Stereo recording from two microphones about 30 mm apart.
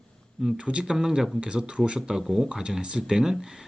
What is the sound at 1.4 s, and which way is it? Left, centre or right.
Speech, right.